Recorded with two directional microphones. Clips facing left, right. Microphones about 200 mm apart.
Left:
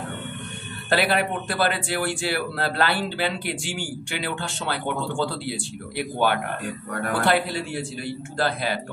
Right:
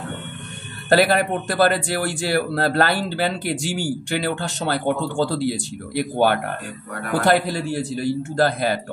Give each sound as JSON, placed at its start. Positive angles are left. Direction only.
{"t": 0.8, "sound": "a man's voice", "side_deg": -45}